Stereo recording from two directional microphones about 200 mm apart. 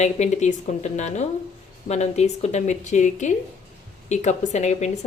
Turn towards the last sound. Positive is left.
turn(degrees=35)  # may be behind; listen again after turning